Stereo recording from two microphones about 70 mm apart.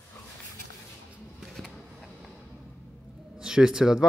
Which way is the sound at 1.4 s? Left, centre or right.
Centre.